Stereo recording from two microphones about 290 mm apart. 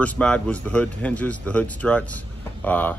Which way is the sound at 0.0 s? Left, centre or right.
Centre.